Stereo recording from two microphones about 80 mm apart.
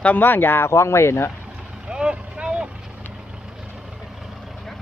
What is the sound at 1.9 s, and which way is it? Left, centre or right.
Boat, centre.